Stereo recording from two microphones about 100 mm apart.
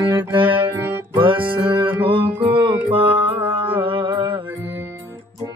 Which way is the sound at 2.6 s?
60° right (ahead or behind).